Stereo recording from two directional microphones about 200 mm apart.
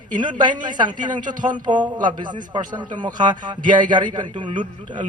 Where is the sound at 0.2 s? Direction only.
20° right (ahead or behind).